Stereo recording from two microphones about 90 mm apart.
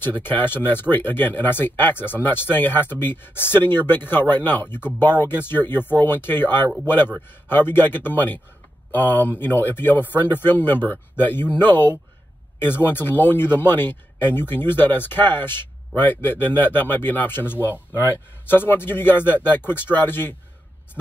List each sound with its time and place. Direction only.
0.0 s speech: 25° left (ahead or behind)